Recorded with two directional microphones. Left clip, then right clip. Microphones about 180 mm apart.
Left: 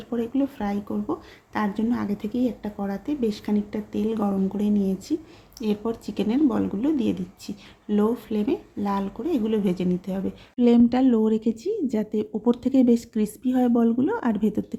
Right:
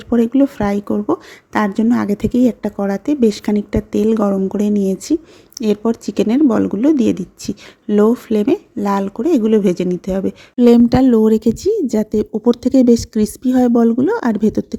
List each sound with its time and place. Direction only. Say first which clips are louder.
0.1 s speech: right 12 dB; 40° right (ahead or behind)